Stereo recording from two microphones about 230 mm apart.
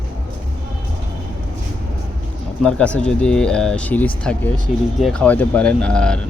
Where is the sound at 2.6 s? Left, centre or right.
Centre.